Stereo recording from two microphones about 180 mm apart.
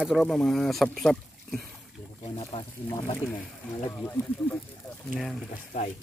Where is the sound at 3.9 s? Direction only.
10° left (ahead or behind).